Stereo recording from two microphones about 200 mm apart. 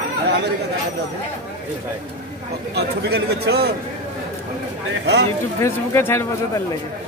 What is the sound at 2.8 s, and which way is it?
Speech, 55° right (ahead or behind).